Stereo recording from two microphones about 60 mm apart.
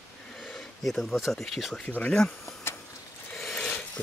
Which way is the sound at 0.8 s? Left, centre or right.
Centre.